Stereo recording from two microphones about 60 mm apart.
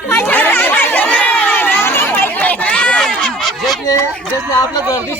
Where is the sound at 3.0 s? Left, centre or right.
Centre.